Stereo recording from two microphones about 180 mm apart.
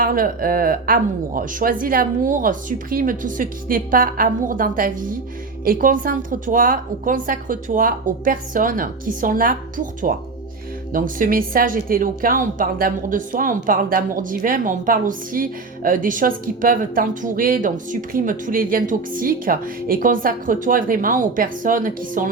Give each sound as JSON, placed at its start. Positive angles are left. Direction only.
{"t": 0.0, "sound": "a woman's voice", "side_deg": -55}